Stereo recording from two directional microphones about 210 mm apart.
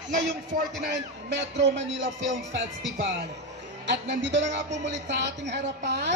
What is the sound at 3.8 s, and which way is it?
A woman's voice, 55° right (ahead or behind).